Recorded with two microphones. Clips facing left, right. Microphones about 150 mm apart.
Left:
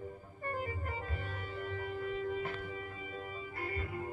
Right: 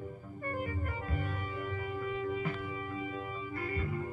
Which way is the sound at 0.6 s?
50° right (ahead or behind).